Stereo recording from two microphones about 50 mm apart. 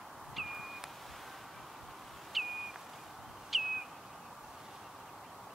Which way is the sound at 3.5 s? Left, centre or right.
Centre.